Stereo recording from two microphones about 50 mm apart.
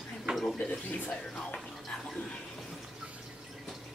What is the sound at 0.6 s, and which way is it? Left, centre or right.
Speech, left.